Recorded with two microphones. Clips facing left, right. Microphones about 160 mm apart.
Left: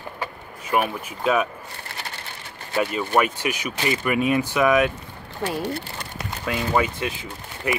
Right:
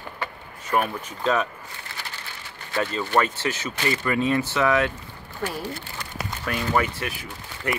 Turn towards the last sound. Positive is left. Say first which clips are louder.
# left 2 dB
turn(degrees=20)  # may be behind; listen again after turning